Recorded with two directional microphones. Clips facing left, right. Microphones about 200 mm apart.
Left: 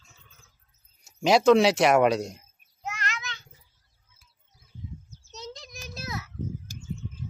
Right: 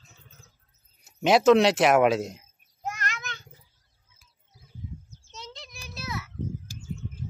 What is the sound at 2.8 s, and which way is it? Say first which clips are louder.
Child singing: right 1 dB; 50° right (ahead or behind).